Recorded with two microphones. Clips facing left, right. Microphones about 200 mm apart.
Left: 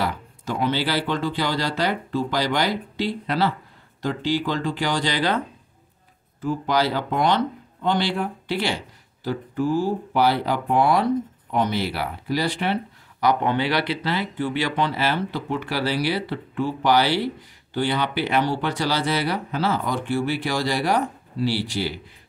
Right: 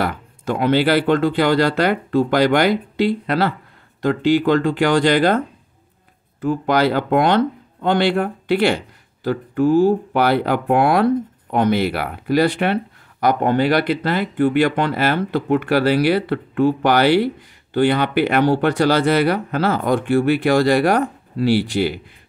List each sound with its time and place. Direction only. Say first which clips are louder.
0.0 s speech: right 4 dB; 55° right (ahead or behind)
6.4 s speech: right 5 dB; 60° right (ahead or behind)